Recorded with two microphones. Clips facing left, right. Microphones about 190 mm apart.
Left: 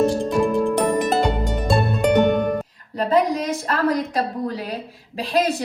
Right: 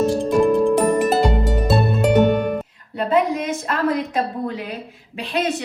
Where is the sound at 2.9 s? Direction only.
35° left (ahead or behind).